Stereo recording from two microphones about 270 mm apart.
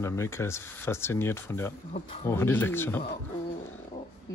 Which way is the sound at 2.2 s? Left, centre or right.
Centre.